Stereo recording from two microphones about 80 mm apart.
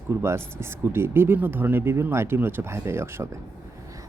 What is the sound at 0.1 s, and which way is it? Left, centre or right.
Speech, right.